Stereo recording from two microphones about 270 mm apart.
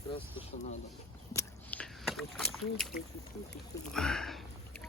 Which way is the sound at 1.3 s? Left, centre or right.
Centre.